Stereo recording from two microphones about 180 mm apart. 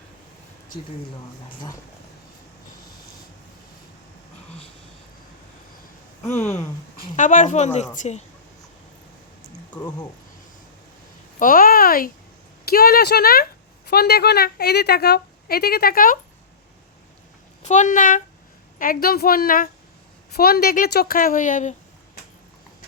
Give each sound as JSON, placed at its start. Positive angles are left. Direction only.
{"t": 1.5, "sound": "speech", "side_deg": 20}
{"t": 6.4, "sound": "speech", "side_deg": 15}
{"t": 6.9, "sound": "a woman's voice", "side_deg": 50}
{"t": 11.3, "sound": "speech", "side_deg": 50}
{"t": 17.6, "sound": "a woman's voice", "side_deg": 40}